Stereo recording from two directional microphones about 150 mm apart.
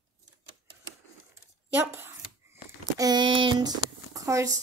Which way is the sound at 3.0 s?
30° right (ahead or behind).